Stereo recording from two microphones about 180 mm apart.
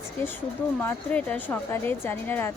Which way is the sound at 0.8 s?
10° left (ahead or behind).